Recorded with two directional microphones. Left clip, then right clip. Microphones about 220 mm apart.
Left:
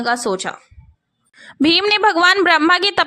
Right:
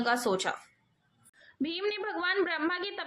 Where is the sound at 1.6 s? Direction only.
55° left (ahead or behind).